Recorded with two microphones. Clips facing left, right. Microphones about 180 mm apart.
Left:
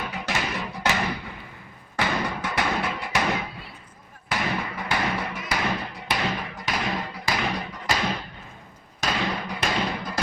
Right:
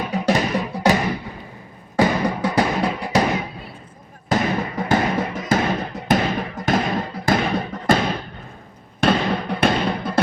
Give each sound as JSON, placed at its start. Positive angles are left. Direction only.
{"t": 0.1, "sound": "music", "side_deg": -35}
{"t": 2.0, "sound": "music", "side_deg": -35}
{"t": 4.3, "sound": "music", "side_deg": -40}
{"t": 9.0, "sound": "fireworks", "side_deg": -55}